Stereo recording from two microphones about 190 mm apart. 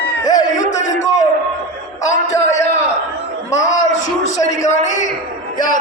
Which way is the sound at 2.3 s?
35° left (ahead or behind).